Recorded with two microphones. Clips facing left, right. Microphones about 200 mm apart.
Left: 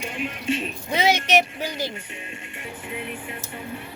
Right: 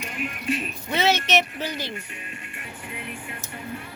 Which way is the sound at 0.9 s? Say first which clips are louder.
Left 1 dB; 15° left (ahead or behind).